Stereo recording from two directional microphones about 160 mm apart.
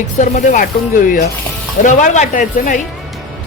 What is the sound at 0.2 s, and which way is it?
Speech, 55° left (ahead or behind).